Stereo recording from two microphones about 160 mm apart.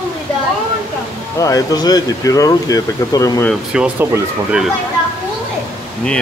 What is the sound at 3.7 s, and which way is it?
Speech, 5° right (ahead or behind).